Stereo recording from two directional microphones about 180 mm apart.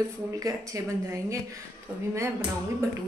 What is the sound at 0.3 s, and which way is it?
Speech, 15° right (ahead or behind).